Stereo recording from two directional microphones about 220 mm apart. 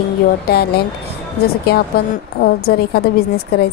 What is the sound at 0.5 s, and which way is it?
Speech, 45° left (ahead or behind).